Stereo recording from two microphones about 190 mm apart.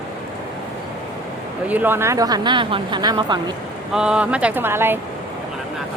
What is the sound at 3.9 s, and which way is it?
Speech, 5° right (ahead or behind).